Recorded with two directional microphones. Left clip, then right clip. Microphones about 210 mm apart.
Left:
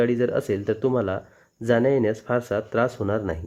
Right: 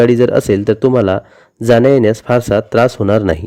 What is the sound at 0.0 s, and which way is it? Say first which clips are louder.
Speech: right 12 dB; 40° right (ahead or behind).